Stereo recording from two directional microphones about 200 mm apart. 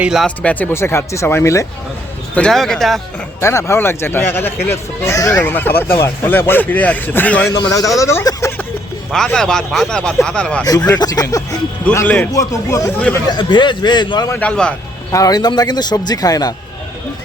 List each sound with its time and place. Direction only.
0.0 s a man's voice: centre (ahead or behind)
3.4 s a man's voice: 15° left (ahead or behind)
9.1 s speech: 5° left (ahead or behind)
10.7 s a man's voice: 20° left (ahead or behind)
11.9 s a man's voice: 5° left (ahead or behind)
13.2 s a man's voice: 20° left (ahead or behind)
14.3 s speech: 5° left (ahead or behind)
15.1 s a man's voice: 20° left (ahead or behind)